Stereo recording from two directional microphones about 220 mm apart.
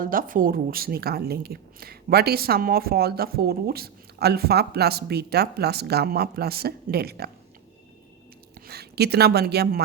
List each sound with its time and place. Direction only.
0.0 s a woman's voice: 40° right (ahead or behind)
8.6 s a woman's voice: 45° right (ahead or behind)